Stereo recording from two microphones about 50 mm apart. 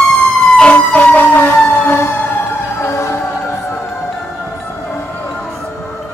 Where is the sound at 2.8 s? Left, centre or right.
Left.